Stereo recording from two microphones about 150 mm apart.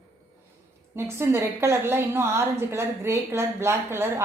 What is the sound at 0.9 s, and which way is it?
A woman's voice, 15° right (ahead or behind).